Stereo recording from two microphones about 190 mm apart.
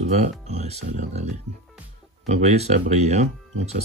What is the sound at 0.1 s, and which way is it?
Speech, 35° right (ahead or behind).